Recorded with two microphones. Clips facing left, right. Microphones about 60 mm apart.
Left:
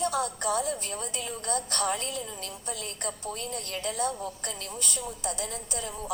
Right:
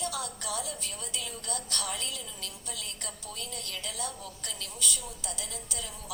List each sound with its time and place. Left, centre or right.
0.0 s a woman's voice: left